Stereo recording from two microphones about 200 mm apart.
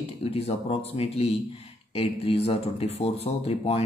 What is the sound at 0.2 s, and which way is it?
Speech, 30° left (ahead or behind).